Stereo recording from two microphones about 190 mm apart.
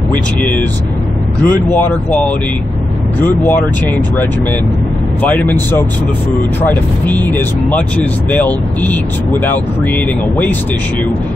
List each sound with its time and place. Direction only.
0.1 s speech: 10° left (ahead or behind)
5.2 s speech: 10° left (ahead or behind)